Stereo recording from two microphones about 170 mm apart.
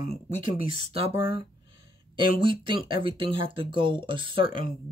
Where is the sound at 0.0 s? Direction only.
45° left (ahead or behind).